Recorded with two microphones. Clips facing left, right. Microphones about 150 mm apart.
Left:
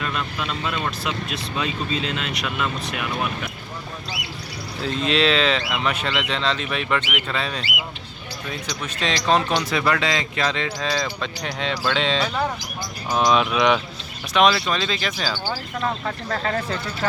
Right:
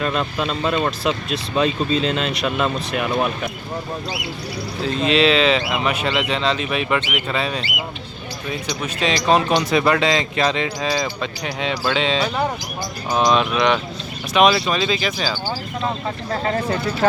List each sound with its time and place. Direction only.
0.0 s speech: 35° right (ahead or behind)
4.8 s speech: centre (ahead or behind)
8.8 s speech: 10° right (ahead or behind)
14.3 s speech: 10° right (ahead or behind)
15.8 s speech: 20° right (ahead or behind)
16.6 s speech: 60° right (ahead or behind)